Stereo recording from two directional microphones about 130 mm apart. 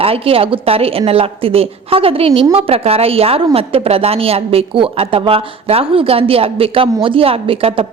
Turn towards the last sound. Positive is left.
turn(degrees=-45)  # may be behind; listen again after turning